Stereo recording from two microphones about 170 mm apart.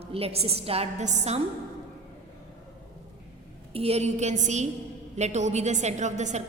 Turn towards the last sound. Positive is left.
turn(degrees=-45)  # may be behind; listen again after turning